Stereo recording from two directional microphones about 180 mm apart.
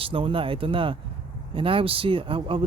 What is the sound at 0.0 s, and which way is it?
Speech, 30° right (ahead or behind).